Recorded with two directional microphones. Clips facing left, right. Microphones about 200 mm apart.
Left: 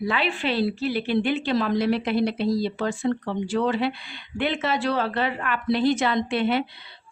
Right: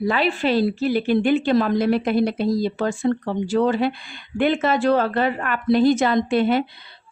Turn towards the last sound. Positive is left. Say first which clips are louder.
# right 4 dB
turn(degrees=-45)  # may be behind; listen again after turning